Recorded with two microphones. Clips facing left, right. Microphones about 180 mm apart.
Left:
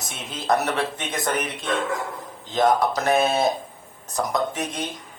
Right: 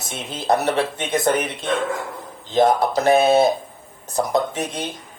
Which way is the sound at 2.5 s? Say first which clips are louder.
Right 3 dB; 30° right (ahead or behind).